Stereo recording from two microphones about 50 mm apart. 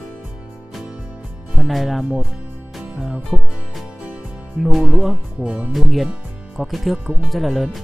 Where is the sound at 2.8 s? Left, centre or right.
Centre.